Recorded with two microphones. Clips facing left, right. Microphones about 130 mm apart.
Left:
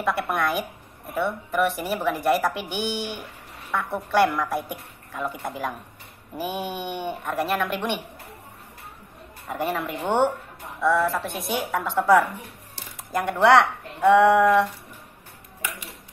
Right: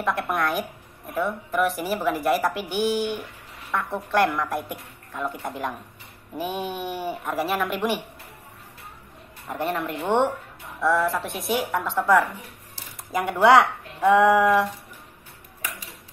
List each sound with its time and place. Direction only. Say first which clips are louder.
0.0 s a woman's voice: even; centre (ahead or behind)
9.5 s a woman's voice: even; centre (ahead or behind)